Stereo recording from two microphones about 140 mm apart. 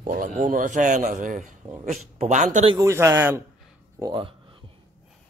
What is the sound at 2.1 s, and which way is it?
Speech, 55° right (ahead or behind).